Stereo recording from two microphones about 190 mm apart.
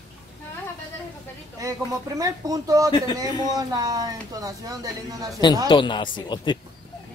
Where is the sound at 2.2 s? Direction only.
20° right (ahead or behind).